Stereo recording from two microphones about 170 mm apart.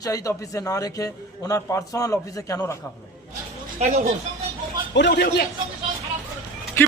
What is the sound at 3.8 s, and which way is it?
Speech, 40° right (ahead or behind).